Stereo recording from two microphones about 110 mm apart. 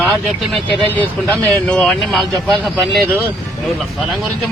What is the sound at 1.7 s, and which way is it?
Speech, 5° left (ahead or behind).